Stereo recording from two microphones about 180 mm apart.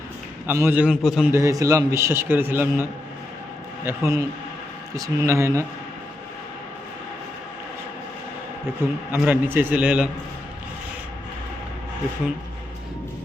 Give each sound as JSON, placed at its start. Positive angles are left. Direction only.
{"t": 0.4, "sound": "a man's voice", "side_deg": -10}
{"t": 1.3, "sound": "a man's voice", "side_deg": -15}
{"t": 3.8, "sound": "a man's voice", "side_deg": -20}
{"t": 8.8, "sound": "a man's voice", "side_deg": -10}